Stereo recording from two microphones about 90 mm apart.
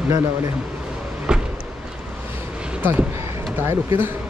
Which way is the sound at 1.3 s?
10° right (ahead or behind).